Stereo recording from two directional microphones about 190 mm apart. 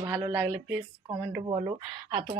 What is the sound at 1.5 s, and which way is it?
Speech, 25° right (ahead or behind).